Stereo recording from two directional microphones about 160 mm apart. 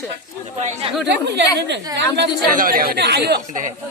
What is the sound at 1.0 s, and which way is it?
Speech, 90° right.